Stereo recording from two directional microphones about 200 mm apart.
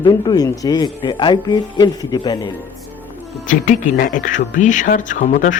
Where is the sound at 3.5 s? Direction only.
40° left (ahead or behind).